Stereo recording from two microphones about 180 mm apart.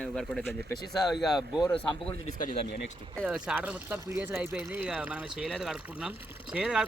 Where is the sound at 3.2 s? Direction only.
5° right (ahead or behind).